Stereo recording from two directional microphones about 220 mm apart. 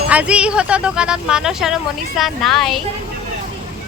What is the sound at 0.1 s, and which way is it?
Speech, 5° right (ahead or behind).